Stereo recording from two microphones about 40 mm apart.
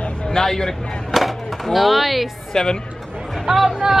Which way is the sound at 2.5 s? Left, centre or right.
Centre.